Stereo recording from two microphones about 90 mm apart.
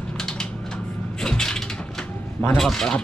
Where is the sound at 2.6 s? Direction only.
5° left (ahead or behind).